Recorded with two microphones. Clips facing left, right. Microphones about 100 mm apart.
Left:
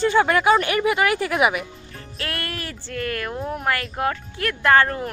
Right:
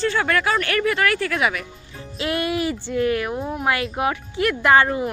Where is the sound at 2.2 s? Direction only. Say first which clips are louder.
Right 8 dB; 15° right (ahead or behind).